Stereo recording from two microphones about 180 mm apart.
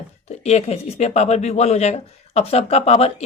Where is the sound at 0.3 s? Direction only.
35° left (ahead or behind).